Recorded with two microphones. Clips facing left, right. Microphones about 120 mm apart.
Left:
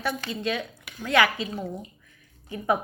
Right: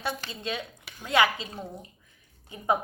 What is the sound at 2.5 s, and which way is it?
Speech, 20° right (ahead or behind).